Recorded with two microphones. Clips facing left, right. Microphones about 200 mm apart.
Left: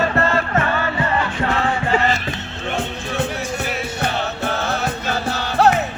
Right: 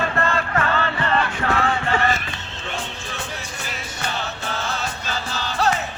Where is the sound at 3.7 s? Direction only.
60° left (ahead or behind).